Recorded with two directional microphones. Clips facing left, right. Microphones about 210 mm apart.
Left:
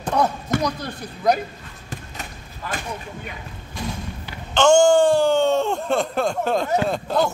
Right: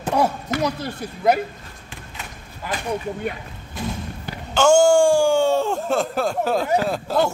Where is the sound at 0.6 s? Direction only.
5° right (ahead or behind).